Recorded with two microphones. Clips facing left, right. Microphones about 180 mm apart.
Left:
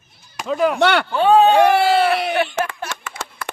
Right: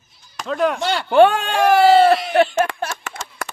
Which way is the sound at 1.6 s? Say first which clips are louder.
Right 2 dB; 65° left (ahead or behind).